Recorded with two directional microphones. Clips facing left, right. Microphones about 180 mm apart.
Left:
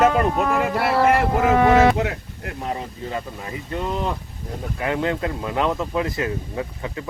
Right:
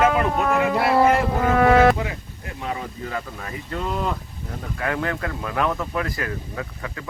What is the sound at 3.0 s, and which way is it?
Speech, 20° left (ahead or behind).